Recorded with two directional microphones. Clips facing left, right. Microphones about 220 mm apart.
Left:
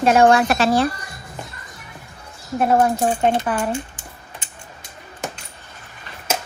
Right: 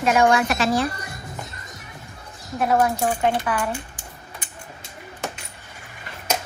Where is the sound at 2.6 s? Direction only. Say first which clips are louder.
Left 3 dB; 35° left (ahead or behind).